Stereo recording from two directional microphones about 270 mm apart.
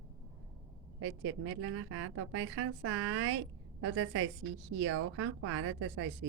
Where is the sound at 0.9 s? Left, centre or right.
Right.